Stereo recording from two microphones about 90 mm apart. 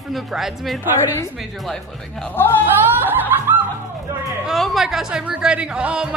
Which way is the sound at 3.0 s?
20° right (ahead or behind).